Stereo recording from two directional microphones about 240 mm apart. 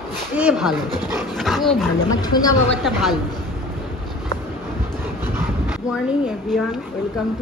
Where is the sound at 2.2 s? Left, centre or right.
Centre.